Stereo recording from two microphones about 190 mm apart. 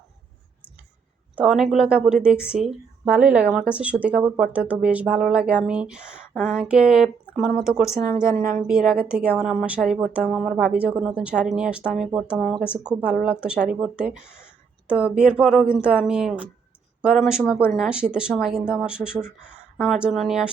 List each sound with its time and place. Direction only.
1.4 s speech: centre (ahead or behind)
8.4 s speech: 45° right (ahead or behind)
8.6 s speech: 5° right (ahead or behind)